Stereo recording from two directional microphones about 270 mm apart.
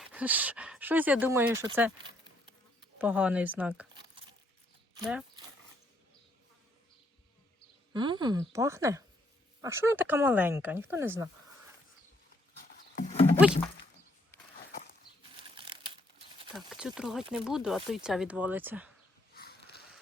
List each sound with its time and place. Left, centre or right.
0.0 s speech: centre
7.9 s speech: centre
12.7 s a sound: left
15.4 s crumpling: centre
16.6 s speech: centre
19.3 s a sound: left